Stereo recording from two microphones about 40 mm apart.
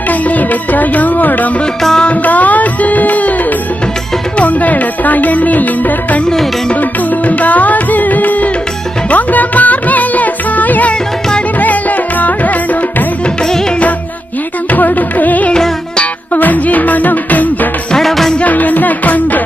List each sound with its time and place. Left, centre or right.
0.1 s music: left
4.4 s music: left
14.7 s music: left
17.9 s music: centre
18.4 s music: left